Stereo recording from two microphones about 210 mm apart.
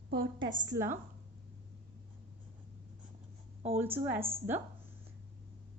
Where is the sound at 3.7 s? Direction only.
10° right (ahead or behind).